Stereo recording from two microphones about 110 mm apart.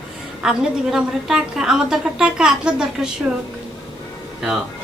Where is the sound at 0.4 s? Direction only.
5° right (ahead or behind).